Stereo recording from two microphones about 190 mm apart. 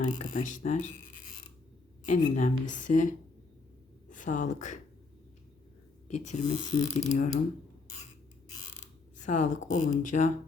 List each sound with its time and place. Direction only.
0.0 s speech: 40° left (ahead or behind)
6.1 s speech: 40° left (ahead or behind)
9.1 s speech: 40° left (ahead or behind)